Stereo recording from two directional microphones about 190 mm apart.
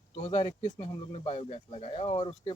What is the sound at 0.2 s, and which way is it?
Speech, 35° left (ahead or behind).